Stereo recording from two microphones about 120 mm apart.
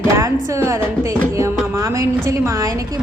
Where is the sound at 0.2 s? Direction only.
25° right (ahead or behind).